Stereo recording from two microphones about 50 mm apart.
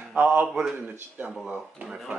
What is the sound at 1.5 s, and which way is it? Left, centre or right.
Speech, centre.